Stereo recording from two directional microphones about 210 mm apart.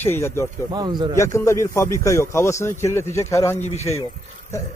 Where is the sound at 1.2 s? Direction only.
15° left (ahead or behind).